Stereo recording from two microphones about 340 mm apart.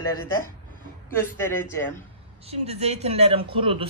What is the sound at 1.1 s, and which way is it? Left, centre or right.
Speech, centre.